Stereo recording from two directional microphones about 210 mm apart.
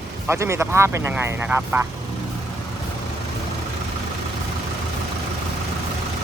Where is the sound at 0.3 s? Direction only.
15° right (ahead or behind).